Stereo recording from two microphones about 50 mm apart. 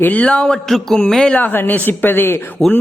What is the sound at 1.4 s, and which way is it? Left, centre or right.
Speech, left.